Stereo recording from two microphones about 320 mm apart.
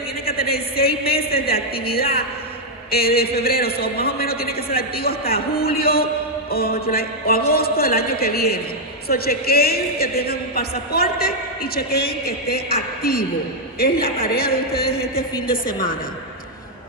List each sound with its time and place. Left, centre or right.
0.2 s a man's voice: left